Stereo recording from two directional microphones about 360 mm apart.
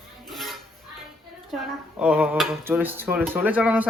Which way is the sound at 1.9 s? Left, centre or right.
Centre.